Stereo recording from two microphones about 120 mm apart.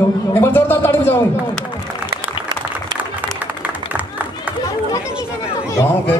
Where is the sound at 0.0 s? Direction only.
20° left (ahead or behind).